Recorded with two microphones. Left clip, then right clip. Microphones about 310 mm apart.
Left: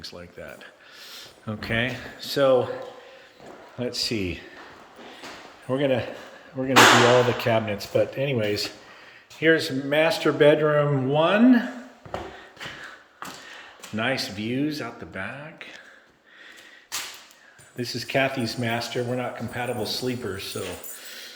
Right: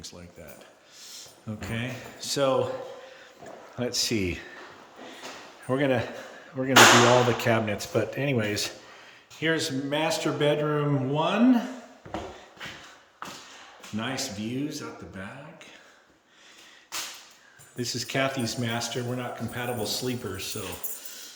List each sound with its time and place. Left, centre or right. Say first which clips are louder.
0.0 s speech: left 6 dB; centre
3.8 s speech: even; centre
5.6 s speech: left 2 dB; centre
13.9 s speech: left 6 dB; centre
17.7 s speech: left 4 dB; centre
21.0 s dog: left 4 dB; centre